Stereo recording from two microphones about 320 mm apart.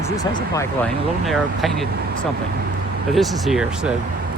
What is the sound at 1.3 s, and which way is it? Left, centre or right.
Speech, centre.